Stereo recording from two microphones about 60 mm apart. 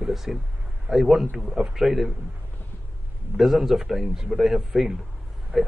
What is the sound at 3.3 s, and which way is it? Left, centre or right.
Speech, centre.